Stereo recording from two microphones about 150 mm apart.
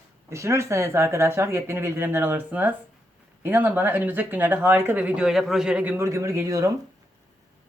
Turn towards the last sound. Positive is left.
turn(degrees=-20)  # may be behind; listen again after turning